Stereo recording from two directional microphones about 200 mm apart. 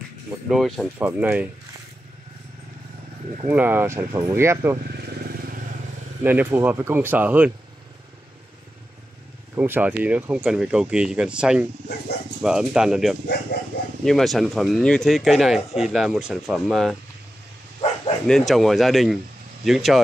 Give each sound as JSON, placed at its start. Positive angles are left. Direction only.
{"t": 0.5, "sound": "speech", "side_deg": 0}
{"t": 3.4, "sound": "speech", "side_deg": -10}
{"t": 4.8, "sound": "vehicle", "side_deg": -50}
{"t": 6.2, "sound": "speech", "side_deg": -10}
{"t": 9.6, "sound": "speech", "side_deg": -10}
{"t": 18.2, "sound": "speech", "side_deg": 0}